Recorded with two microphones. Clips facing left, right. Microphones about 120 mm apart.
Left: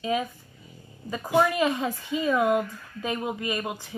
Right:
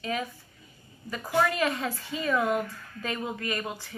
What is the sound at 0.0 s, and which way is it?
Speech, 20° left (ahead or behind).